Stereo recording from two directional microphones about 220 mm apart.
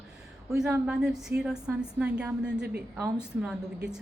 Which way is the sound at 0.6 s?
5° right (ahead or behind).